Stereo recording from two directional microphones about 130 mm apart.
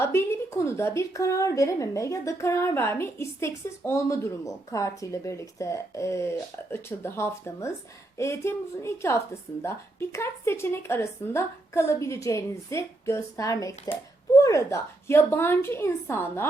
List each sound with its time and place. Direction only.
0.0 s a woman's voice: 20° left (ahead or behind)